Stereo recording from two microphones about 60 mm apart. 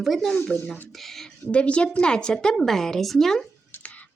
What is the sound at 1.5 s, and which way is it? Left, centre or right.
A woman's voice, left.